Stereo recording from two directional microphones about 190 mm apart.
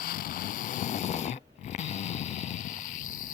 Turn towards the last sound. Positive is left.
turn(degrees=45)  # may be behind; listen again after turning